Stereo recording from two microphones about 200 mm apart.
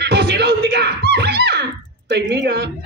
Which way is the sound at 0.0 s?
55° right (ahead or behind).